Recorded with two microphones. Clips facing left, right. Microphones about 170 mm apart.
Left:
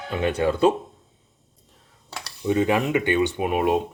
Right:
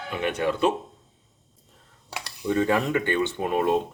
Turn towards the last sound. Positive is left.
turn(degrees=15)  # may be behind; listen again after turning